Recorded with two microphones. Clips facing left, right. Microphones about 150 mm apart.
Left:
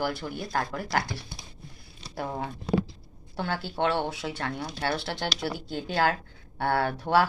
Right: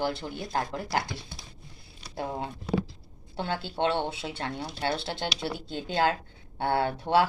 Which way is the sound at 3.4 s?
25° right (ahead or behind).